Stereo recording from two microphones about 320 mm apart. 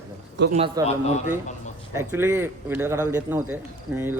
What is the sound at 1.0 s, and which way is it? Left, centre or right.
Speech, left.